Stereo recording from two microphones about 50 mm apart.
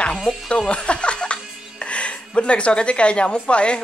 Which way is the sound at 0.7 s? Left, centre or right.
Left.